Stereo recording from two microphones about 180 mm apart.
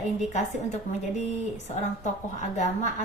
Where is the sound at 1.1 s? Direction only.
40° left (ahead or behind).